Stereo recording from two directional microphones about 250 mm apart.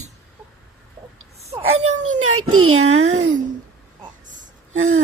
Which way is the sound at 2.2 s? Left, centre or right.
Right.